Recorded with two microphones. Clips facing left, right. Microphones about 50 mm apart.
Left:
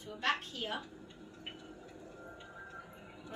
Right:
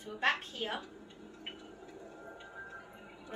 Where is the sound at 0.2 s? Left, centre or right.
Right.